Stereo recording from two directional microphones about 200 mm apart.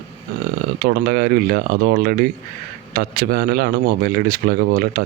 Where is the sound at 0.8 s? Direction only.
45° right (ahead or behind).